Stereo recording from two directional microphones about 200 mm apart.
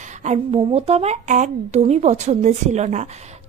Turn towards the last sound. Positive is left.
turn(degrees=-35)  # may be behind; listen again after turning